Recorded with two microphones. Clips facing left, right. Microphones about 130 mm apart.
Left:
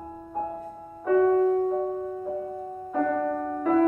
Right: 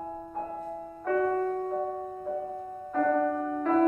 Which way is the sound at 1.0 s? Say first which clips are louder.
Left 7 dB; 10° left (ahead or behind).